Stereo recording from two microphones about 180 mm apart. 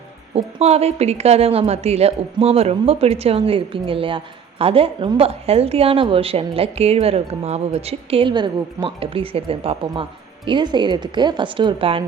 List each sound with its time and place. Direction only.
0.3 s a woman's voice: 35° right (ahead or behind)